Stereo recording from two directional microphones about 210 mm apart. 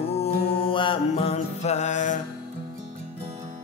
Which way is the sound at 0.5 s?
25° left (ahead or behind).